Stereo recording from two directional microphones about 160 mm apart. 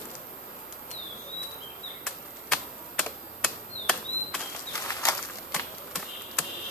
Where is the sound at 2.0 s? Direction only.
Centre (ahead or behind).